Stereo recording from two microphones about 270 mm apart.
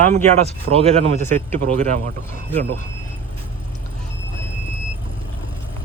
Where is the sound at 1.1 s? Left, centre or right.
Right.